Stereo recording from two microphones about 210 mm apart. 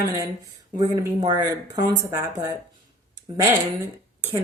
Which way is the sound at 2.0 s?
15° right (ahead or behind).